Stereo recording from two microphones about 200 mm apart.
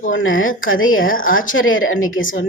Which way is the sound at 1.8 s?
90° left.